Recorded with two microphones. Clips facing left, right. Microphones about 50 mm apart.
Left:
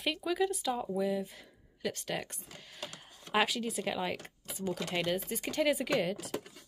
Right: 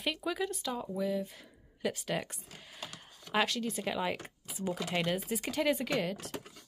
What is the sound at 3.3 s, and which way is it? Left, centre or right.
Speech, centre.